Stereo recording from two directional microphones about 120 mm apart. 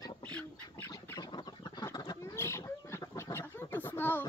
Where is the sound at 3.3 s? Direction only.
20° left (ahead or behind).